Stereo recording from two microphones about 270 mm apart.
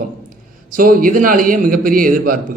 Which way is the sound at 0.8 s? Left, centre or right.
Right.